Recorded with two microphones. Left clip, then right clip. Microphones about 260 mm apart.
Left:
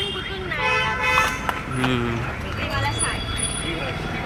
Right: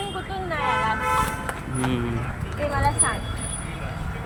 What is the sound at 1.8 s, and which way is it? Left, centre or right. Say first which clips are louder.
Speech: left 4 dB; centre.